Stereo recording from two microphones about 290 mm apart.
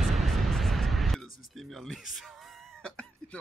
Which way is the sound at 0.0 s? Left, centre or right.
Centre.